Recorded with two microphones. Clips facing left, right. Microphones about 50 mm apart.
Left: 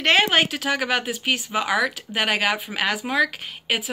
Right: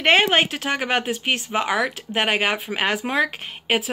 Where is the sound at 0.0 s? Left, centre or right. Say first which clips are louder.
Right 1 dB; centre.